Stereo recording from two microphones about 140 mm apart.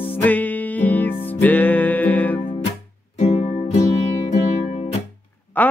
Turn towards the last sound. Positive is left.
turn(degrees=10)  # may be behind; listen again after turning